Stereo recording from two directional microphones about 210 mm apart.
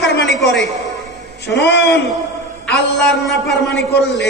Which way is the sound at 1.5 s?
55° left (ahead or behind).